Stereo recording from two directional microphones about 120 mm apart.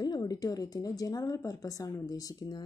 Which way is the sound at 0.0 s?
35° left (ahead or behind).